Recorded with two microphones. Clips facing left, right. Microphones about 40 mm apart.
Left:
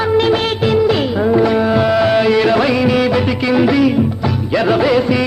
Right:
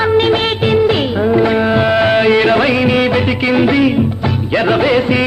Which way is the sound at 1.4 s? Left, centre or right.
Right.